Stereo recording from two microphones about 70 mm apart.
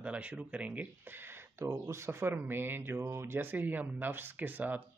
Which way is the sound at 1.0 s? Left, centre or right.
Right.